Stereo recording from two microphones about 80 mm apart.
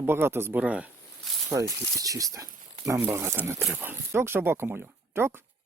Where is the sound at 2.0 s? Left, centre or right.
Right.